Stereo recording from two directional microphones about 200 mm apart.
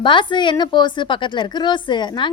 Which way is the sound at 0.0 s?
25° left (ahead or behind).